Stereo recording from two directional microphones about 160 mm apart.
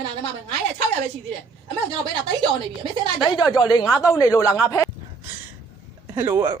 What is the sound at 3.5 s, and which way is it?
Speech, 25° left (ahead or behind).